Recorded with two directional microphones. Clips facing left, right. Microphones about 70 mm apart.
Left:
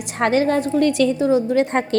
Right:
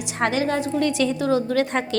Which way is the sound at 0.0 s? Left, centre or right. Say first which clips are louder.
Left 4 dB; left.